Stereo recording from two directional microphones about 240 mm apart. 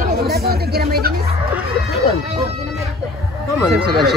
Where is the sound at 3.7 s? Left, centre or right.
Right.